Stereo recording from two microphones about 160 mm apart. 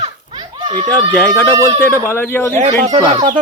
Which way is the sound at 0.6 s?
25° right (ahead or behind).